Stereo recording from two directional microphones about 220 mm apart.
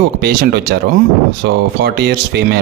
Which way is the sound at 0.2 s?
45° right (ahead or behind).